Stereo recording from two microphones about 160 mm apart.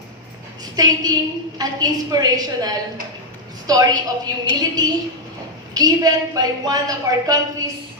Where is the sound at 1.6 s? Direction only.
25° right (ahead or behind).